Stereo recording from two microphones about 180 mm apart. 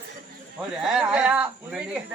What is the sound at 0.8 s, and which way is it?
Speech, 5° right (ahead or behind).